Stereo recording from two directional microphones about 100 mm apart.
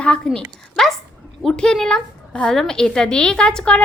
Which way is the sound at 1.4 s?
5° left (ahead or behind).